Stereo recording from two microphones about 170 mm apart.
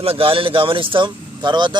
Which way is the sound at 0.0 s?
35° right (ahead or behind).